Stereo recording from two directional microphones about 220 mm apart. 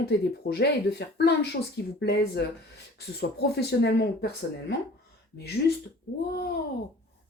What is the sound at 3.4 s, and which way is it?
Speech, 45° left (ahead or behind).